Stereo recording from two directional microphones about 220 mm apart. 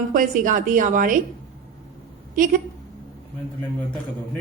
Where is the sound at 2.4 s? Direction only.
35° right (ahead or behind).